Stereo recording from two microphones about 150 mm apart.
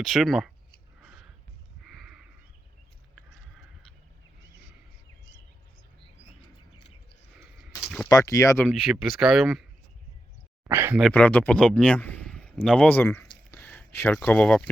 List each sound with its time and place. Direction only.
0.0 s speech: centre (ahead or behind)
1.0 s a sound: 5° right (ahead or behind)
8.0 s speech: 20° left (ahead or behind)
8.6 s speech: centre (ahead or behind)
10.7 s speech: 15° right (ahead or behind)
11.1 s speech: 10° left (ahead or behind)